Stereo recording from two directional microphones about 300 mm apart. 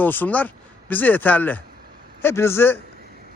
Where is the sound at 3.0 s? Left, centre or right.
Right.